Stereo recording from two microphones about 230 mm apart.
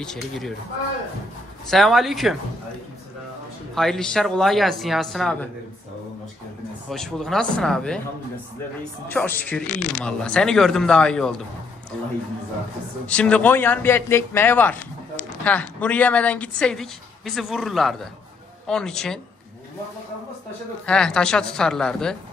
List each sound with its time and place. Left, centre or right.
0.0 s a woman's voice: centre
1.7 s a woman's voice: centre
3.7 s a woman's voice: centre
6.9 s a woman's voice: centre
9.1 s a woman's voice: centre
9.7 s speech: right
9.9 s a woman's voice: centre
13.0 s a man's voice: centre
20.8 s a woman's voice: centre